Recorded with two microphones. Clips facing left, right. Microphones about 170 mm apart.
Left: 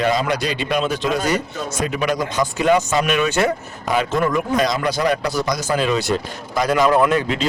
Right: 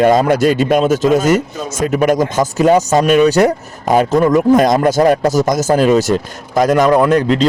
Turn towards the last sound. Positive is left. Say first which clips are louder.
# right 6 dB
turn(degrees=-40)  # may be behind; listen again after turning